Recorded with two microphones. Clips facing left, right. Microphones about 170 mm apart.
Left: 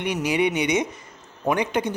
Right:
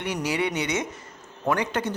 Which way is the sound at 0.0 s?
15° left (ahead or behind).